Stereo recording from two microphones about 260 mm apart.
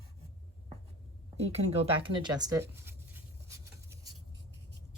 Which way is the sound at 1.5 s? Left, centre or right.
Right.